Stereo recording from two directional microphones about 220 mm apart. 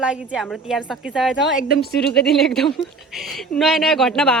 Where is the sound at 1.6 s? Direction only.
45° left (ahead or behind).